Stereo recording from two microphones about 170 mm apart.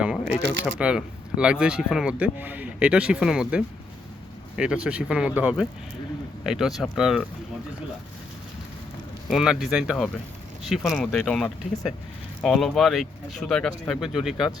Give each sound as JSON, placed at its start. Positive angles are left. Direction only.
{"t": 0.6, "sound": "speech", "side_deg": -5}
{"t": 9.3, "sound": "speech", "side_deg": 0}
{"t": 11.7, "sound": "speech", "side_deg": 20}
{"t": 12.4, "sound": "speech", "side_deg": 0}